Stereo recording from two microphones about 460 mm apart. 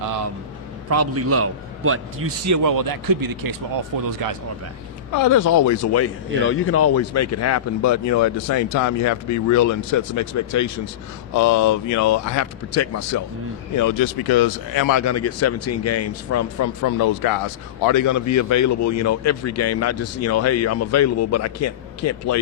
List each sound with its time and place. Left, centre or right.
0.9 s a man's voice: right
2.6 s speech: right
5.1 s a man's voice: left
16.9 s a man's voice: left